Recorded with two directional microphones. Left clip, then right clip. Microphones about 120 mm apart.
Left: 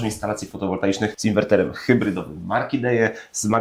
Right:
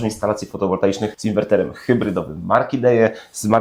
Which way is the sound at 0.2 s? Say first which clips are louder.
Right 6 dB; 30° right (ahead or behind).